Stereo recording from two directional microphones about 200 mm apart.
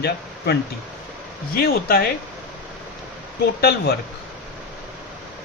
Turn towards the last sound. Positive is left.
turn(degrees=50)  # may be behind; listen again after turning